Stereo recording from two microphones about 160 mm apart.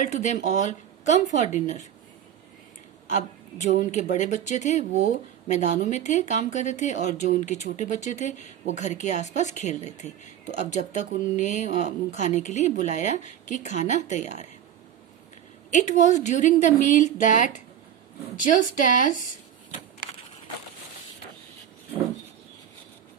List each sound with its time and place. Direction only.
0.0 s speech: 50° left (ahead or behind)
3.1 s a woman's voice: 50° left (ahead or behind)
15.7 s speech: 50° left (ahead or behind)